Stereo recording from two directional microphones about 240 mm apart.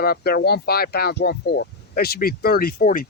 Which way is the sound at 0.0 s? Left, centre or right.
Left.